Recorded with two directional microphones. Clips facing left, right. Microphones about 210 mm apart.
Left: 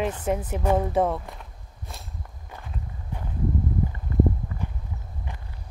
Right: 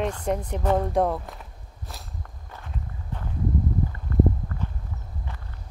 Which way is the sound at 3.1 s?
10° left (ahead or behind).